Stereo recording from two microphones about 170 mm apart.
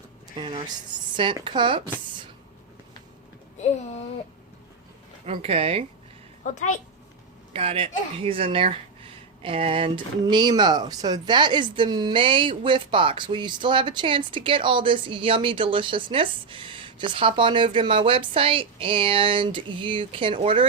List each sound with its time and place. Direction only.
0.3 s speech: 30° right (ahead or behind)
5.2 s speech: 35° right (ahead or behind)
6.4 s a woman's voice: 45° left (ahead or behind)
7.5 s speech: 35° right (ahead or behind)